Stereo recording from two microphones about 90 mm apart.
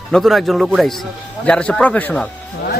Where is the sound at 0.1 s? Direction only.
Centre (ahead or behind).